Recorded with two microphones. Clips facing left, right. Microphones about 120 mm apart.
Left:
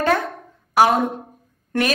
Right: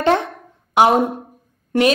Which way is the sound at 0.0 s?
25° right (ahead or behind).